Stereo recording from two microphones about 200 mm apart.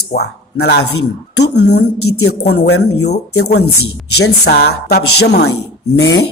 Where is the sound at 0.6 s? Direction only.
55° left (ahead or behind); by 2.3 s 75° left (ahead or behind).